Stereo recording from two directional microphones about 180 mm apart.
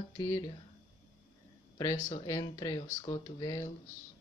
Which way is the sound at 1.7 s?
20° left (ahead or behind).